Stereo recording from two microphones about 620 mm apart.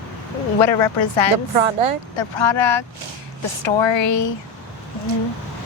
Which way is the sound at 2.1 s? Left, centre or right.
Left.